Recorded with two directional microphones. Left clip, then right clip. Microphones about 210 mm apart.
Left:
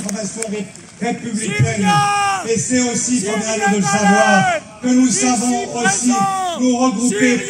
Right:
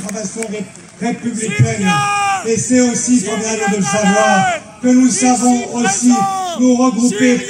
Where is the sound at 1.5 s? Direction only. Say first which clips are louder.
Even; 5° left (ahead or behind).